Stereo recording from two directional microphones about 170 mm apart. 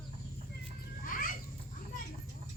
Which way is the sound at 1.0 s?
55° left (ahead or behind).